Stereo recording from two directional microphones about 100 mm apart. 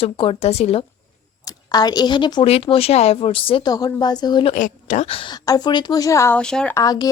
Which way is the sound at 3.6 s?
40° left (ahead or behind).